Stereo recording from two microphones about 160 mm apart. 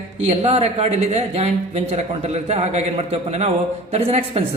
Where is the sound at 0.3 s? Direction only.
40° right (ahead or behind).